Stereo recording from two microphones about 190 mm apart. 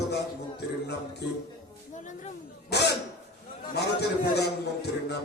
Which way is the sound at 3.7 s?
60° left (ahead or behind).